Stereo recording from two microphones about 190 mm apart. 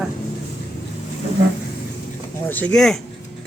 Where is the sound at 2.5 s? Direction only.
5° left (ahead or behind).